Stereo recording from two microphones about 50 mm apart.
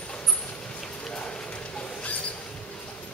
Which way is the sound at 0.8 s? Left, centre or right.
Centre.